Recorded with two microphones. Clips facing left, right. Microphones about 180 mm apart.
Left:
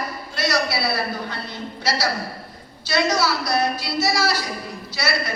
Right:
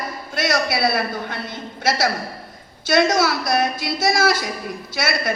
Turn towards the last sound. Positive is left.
turn(degrees=-50)  # may be behind; listen again after turning